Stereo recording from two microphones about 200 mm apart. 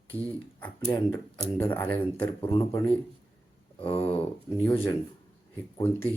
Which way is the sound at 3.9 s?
25° left (ahead or behind).